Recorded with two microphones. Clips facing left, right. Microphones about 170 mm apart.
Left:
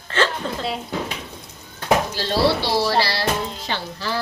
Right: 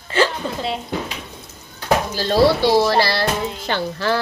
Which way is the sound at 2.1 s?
45° right (ahead or behind).